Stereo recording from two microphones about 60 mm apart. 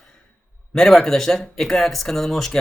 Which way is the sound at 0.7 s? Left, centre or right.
Centre.